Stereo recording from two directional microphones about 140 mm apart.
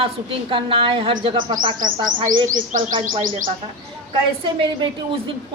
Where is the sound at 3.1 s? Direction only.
70° right (ahead or behind).